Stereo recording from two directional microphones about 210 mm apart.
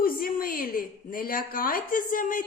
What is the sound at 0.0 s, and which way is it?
A woman's voice, 45° left (ahead or behind).